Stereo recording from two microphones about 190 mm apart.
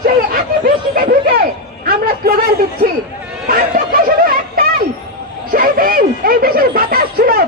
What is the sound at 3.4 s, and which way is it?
Chatter, 50° right (ahead or behind).